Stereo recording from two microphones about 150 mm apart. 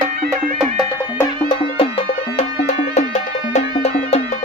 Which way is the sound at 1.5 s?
40° left (ahead or behind).